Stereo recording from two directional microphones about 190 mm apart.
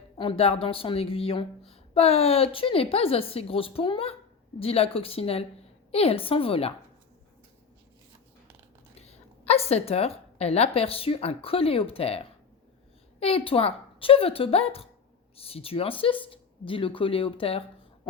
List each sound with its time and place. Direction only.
0.2 s a woman's voice: 30° left (ahead or behind)
9.5 s a woman's voice: 35° left (ahead or behind)